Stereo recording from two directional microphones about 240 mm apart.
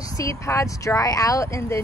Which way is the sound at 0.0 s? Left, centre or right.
Centre.